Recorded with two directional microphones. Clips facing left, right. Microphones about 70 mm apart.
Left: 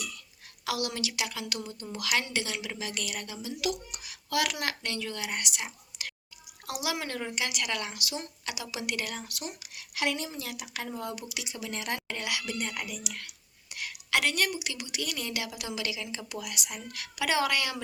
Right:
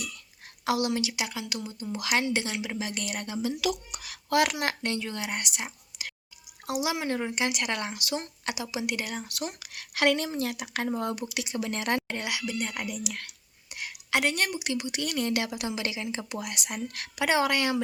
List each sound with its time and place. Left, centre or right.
0.6 s a woman's voice: right
3.9 s speech: right
4.3 s a woman's voice: right
5.6 s whispering: centre
6.7 s a woman's voice: right
7.3 s speech: right
9.3 s speech: right
12.0 s a woman's voice: right
12.5 s speech: centre
12.7 s speech: right
13.1 s speech: right
13.7 s a woman's voice: right
17.2 s a woman's voice: right